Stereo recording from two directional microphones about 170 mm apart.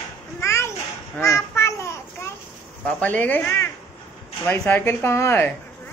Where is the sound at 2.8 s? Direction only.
10° left (ahead or behind).